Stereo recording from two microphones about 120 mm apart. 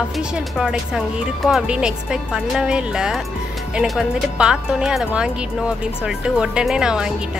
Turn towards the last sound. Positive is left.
turn(degrees=-5)  # may be behind; listen again after turning